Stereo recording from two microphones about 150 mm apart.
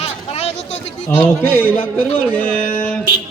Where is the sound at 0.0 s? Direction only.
45° left (ahead or behind).